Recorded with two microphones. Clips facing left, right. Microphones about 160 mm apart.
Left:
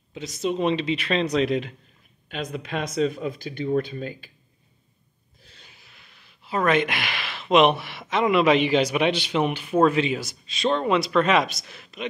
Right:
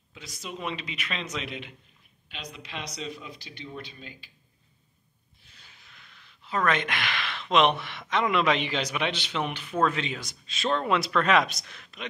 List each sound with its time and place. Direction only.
0.1 s a man's voice: 25° left (ahead or behind); by 4.3 s 50° left (ahead or behind)
5.7 s speech: 5° left (ahead or behind)